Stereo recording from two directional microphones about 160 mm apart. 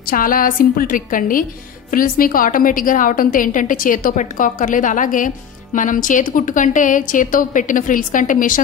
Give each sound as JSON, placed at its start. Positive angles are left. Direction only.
{"t": 0.0, "sound": "a woman's voice", "side_deg": 60}